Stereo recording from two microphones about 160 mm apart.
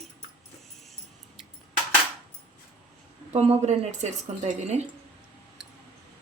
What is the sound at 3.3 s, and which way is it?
Speech, 45° right (ahead or behind).